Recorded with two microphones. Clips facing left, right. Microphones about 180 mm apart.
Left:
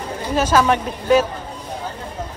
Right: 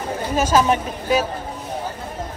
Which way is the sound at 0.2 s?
10° right (ahead or behind).